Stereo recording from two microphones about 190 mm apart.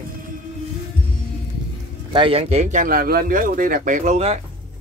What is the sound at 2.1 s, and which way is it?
A man's voice, 30° right (ahead or behind).